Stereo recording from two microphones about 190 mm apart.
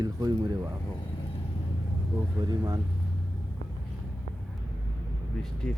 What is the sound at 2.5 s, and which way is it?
Speech, 20° right (ahead or behind).